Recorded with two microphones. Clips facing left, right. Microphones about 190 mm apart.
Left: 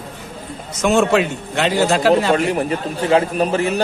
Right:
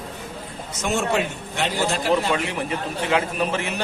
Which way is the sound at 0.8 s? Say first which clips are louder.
Left 8 dB; 90° left.